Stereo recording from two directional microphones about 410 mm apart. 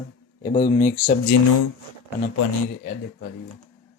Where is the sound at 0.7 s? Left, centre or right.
Centre.